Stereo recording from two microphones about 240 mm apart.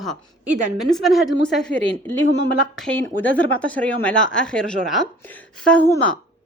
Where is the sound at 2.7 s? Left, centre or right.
Centre.